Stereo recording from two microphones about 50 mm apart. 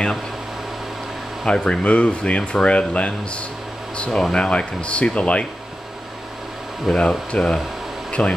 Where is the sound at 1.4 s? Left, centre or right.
Centre.